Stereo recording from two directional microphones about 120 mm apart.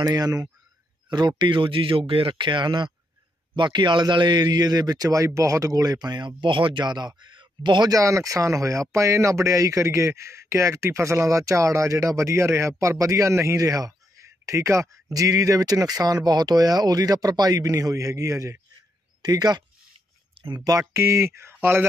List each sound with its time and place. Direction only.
0.0 s speech: 30° right (ahead or behind)
20.3 s a sound: 45° right (ahead or behind)
20.9 s speech: 20° right (ahead or behind)